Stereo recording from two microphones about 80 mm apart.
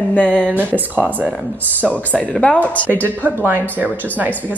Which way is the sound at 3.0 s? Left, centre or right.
Right.